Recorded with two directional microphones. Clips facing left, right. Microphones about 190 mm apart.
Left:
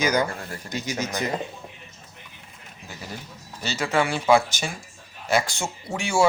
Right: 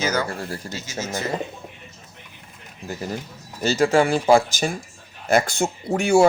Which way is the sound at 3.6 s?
45° right (ahead or behind).